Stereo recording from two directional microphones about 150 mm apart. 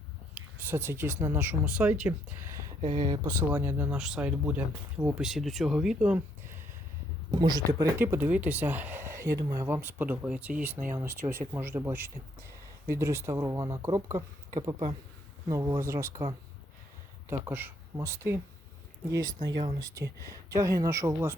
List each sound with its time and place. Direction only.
0.3 s speech: 15° right (ahead or behind)
2.8 s speech: 40° right (ahead or behind)
3.2 s speech: 15° right (ahead or behind)
7.3 s speech: 25° right (ahead or behind)
17.4 s speech: 15° right (ahead or behind)